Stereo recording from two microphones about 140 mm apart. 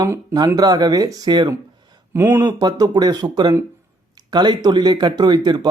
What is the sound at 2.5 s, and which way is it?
Speech, 30° right (ahead or behind).